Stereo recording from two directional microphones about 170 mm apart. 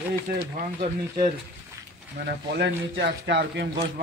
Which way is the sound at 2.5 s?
90° right.